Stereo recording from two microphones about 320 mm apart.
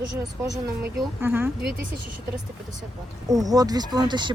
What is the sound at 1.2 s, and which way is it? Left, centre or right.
Speech, centre.